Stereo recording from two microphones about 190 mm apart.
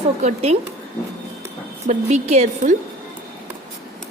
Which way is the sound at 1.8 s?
35° right (ahead or behind).